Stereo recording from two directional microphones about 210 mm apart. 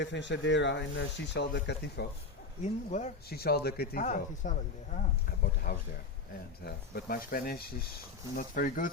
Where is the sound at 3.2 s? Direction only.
50° left (ahead or behind).